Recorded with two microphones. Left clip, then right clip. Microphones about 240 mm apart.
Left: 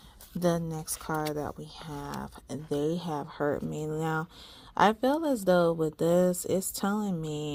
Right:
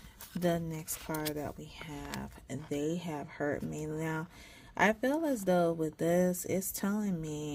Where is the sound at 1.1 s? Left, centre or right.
Centre.